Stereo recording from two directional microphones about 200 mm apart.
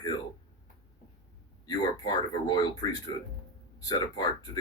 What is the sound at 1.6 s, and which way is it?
Speech, 20° left (ahead or behind).